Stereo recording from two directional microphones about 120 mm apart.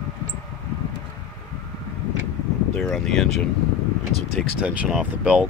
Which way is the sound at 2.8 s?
5° left (ahead or behind).